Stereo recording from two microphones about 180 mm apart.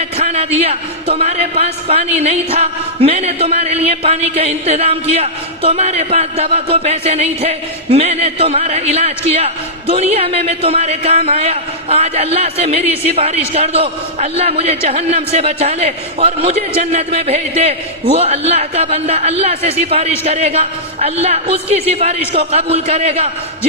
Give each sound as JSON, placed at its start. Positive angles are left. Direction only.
{"t": 0.2, "sound": "a man's voice", "side_deg": -35}